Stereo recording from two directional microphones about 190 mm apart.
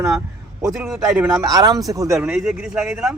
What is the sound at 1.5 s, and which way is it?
Speech, 20° right (ahead or behind).